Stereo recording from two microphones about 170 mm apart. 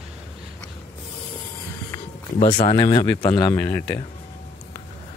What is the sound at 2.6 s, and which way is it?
Speech, 25° left (ahead or behind).